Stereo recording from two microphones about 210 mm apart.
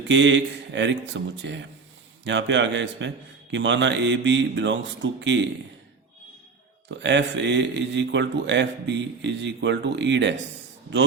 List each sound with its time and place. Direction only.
0.1 s a man's voice: 60° right (ahead or behind)
6.8 s a man's voice: 60° right (ahead or behind)